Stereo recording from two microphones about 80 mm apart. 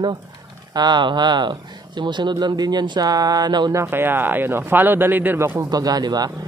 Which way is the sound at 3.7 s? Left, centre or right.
Right.